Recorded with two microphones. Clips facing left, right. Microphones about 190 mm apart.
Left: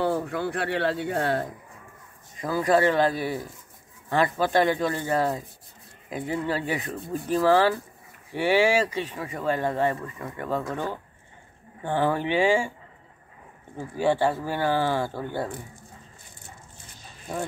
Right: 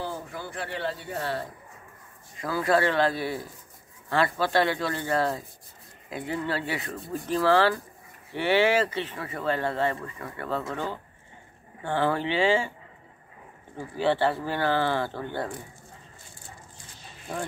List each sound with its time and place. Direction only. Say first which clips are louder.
0.0 s speech: left 9 dB; 65° left (ahead or behind)
2.4 s speech: left 3 dB; 15° left (ahead or behind)
13.7 s speech: left 1 dB; 15° left (ahead or behind)